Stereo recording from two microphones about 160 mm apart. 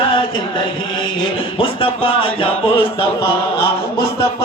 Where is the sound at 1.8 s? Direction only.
35° left (ahead or behind).